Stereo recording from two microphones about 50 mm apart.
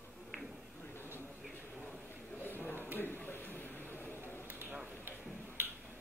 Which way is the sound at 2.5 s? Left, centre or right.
Left.